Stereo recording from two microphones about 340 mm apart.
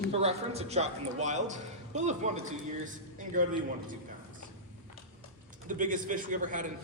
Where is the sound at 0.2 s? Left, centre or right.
Centre.